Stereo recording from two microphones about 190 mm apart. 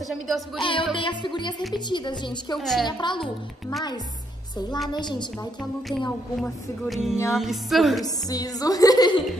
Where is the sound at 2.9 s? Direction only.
25° left (ahead or behind).